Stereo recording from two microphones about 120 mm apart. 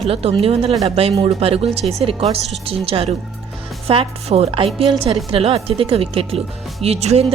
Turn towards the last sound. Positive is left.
turn(degrees=-60)  # may be behind; listen again after turning